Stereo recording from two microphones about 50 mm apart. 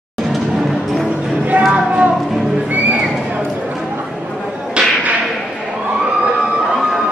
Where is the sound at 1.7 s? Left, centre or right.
Right.